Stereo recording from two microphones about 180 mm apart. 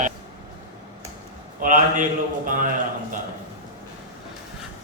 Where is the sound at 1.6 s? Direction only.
45° right (ahead or behind).